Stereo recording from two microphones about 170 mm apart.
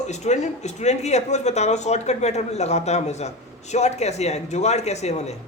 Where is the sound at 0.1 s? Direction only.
40° left (ahead or behind).